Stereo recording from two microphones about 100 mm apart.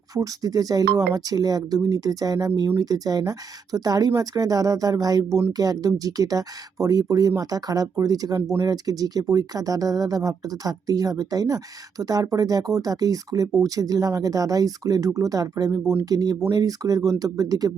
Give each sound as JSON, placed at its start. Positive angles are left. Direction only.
{"t": 0.1, "sound": "speech", "side_deg": -35}